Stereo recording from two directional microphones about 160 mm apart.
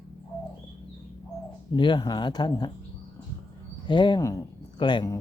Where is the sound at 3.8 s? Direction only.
30° left (ahead or behind).